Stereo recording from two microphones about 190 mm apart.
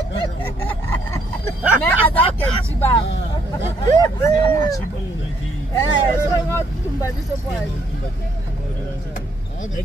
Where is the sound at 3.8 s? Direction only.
20° left (ahead or behind).